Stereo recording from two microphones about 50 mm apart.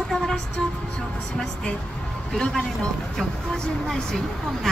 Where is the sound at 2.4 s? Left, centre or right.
Centre.